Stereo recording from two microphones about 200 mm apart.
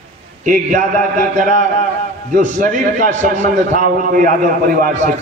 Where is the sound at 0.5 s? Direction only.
40° right (ahead or behind).